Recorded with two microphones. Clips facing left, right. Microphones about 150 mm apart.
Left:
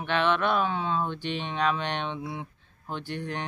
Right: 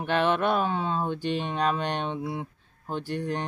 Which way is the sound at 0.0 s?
40° right (ahead or behind).